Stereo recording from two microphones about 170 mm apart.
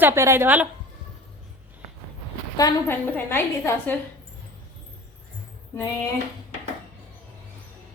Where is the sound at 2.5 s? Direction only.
20° left (ahead or behind).